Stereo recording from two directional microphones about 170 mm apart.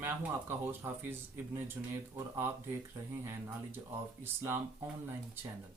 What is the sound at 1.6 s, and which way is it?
Speech, 15° right (ahead or behind).